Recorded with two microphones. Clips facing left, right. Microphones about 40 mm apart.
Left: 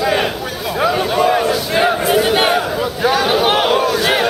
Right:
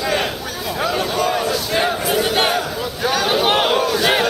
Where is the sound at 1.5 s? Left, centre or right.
Centre.